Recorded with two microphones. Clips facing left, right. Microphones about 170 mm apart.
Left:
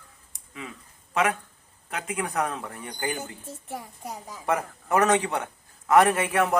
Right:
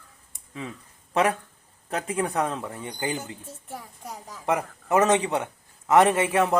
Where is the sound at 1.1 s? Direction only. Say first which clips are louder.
Right 2 dB; 35° right (ahead or behind).